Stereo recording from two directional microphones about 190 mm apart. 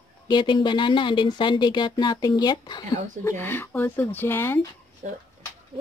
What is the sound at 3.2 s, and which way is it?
Speech, 10° left (ahead or behind).